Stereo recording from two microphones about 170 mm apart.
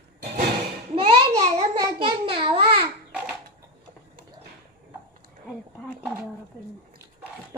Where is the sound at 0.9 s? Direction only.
30° right (ahead or behind).